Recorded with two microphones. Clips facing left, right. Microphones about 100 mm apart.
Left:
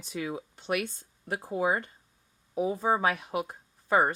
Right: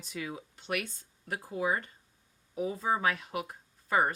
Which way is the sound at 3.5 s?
30° left (ahead or behind).